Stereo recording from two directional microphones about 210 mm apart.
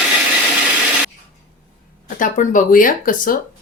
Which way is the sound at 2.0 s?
40° left (ahead or behind).